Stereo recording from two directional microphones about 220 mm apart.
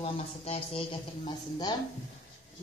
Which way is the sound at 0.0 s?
25° left (ahead or behind).